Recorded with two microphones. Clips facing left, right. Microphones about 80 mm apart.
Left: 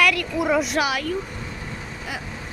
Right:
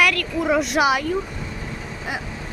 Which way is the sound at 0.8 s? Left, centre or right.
Right.